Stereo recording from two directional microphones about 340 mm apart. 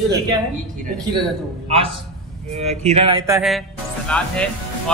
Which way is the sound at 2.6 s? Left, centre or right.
Centre.